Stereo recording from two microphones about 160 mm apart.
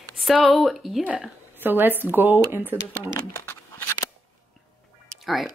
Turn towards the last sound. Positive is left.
turn(degrees=0)  # may be behind; listen again after turning